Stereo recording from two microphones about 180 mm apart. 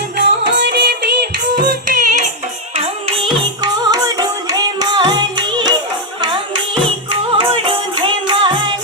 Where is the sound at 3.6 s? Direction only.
20° right (ahead or behind).